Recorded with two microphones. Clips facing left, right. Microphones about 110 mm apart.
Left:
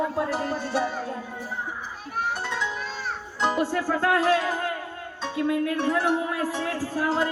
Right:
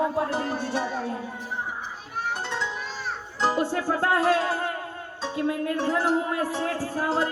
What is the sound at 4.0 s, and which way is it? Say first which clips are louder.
A man's voice: even; 35° right (ahead or behind).